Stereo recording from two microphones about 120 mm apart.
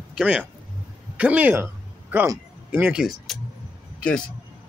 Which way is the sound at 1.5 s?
15° right (ahead or behind).